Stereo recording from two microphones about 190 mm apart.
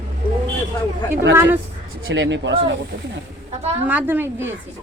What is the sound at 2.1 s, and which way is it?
Speech, 70° right (ahead or behind).